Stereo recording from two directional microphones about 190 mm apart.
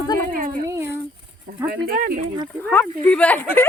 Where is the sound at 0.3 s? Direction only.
45° right (ahead or behind).